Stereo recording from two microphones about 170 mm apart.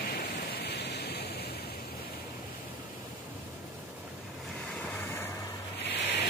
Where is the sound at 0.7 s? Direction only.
80° left.